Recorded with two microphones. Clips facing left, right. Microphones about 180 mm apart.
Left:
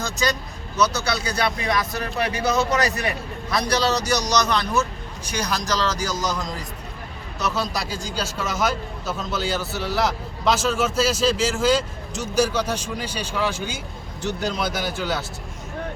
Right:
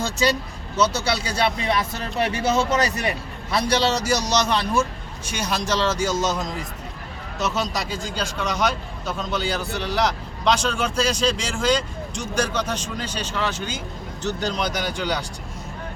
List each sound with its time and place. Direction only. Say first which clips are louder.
0.0 s a man's voice: right 3 dB; 30° right (ahead or behind)
7.7 s a man's voice: right 1 dB; centre (ahead or behind)